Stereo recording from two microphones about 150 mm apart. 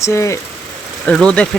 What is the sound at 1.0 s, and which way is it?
Speech, 5° left (ahead or behind).